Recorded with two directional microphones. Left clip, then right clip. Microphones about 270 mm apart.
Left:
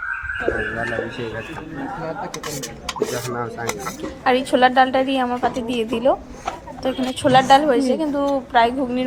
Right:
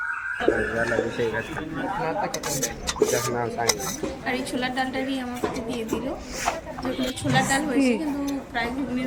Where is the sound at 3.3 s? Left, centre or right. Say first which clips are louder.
Right 1 dB; left.